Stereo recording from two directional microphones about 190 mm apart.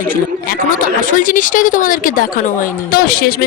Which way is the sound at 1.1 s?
45° left (ahead or behind).